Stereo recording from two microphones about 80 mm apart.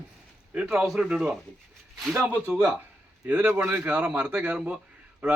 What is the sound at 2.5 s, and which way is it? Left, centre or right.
Speech, centre.